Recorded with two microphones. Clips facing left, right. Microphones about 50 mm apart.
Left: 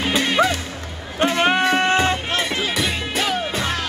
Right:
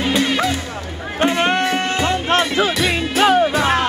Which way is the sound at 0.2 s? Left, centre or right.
Centre.